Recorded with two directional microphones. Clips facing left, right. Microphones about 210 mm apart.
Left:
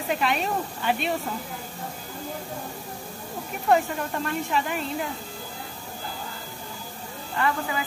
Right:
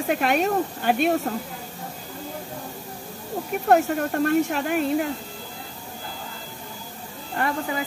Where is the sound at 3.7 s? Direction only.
60° right (ahead or behind).